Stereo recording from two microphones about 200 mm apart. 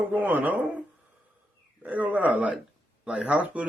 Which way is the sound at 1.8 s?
10° right (ahead or behind).